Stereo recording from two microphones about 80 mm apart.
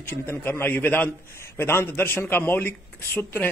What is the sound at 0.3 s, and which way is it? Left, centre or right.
A man's voice, left.